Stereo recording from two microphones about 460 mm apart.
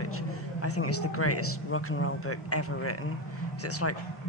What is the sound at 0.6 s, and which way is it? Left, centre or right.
A woman's voice, left.